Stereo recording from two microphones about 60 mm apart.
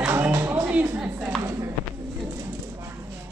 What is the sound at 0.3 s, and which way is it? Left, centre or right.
Music, right.